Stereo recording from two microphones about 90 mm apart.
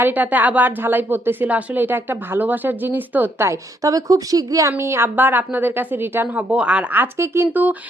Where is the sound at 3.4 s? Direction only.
35° right (ahead or behind).